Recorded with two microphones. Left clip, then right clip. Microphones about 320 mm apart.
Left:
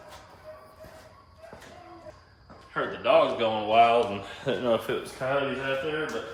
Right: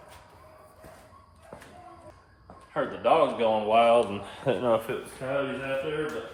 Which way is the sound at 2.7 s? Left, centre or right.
Centre.